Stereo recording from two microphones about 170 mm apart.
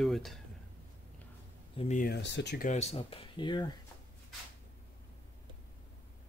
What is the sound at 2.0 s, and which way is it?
Speech, 80° left.